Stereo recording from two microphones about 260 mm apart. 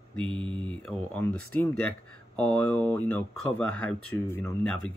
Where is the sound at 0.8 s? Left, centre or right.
Centre.